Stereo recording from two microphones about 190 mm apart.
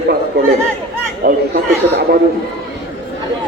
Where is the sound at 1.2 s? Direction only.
55° right (ahead or behind).